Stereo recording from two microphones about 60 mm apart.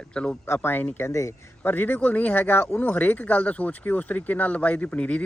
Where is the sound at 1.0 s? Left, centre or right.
Left.